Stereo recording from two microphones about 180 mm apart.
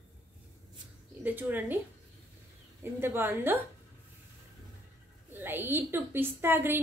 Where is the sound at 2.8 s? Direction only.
10° right (ahead or behind).